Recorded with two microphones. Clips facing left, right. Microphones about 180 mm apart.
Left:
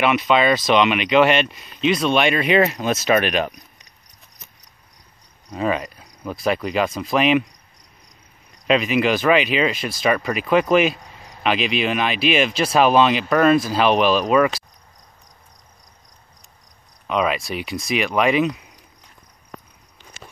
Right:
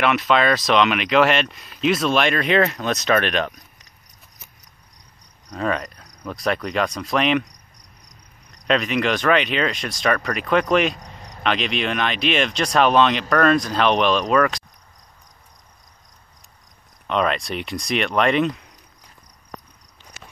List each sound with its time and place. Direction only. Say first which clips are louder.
0.0 s speech: left 1 dB; centre (ahead or behind)
5.5 s speech: left 2 dB; 5° left (ahead or behind)
17.1 s speech: even; 5° left (ahead or behind)
20.2 s walk: left 2 dB; 25° left (ahead or behind)